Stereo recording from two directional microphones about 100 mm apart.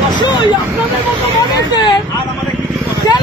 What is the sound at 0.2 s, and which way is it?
Vehicle, 50° left (ahead or behind).